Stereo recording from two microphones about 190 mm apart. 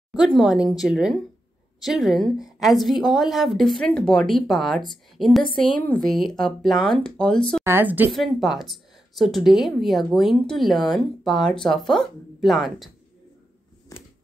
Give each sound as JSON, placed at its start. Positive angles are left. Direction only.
{"t": 0.1, "sound": "speech", "side_deg": 0}
{"t": 5.5, "sound": "a woman's voice", "side_deg": 25}
{"t": 5.8, "sound": "speech", "side_deg": 5}
{"t": 7.6, "sound": "speech", "side_deg": -10}